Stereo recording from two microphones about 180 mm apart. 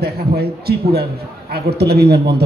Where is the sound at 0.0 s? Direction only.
60° right (ahead or behind).